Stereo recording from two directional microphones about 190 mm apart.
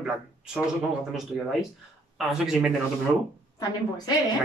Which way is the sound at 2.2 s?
5° right (ahead or behind).